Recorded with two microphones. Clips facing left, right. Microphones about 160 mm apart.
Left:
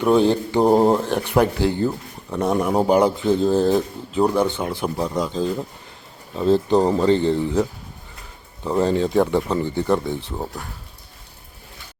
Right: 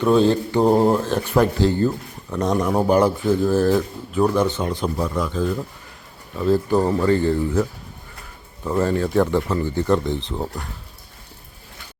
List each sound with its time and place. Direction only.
0.0 s speech: 15° left (ahead or behind); by 10.7 s centre (ahead or behind)